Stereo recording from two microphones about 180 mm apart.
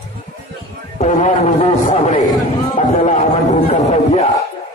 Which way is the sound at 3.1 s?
40° left (ahead or behind).